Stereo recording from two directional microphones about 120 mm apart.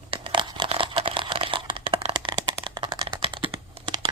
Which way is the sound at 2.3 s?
40° right (ahead or behind).